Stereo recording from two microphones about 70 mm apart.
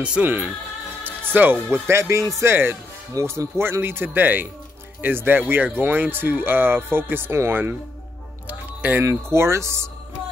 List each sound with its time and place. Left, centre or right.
0.0 s speech: centre
3.1 s speech: right
8.5 s a sound: right
9.0 s speech: right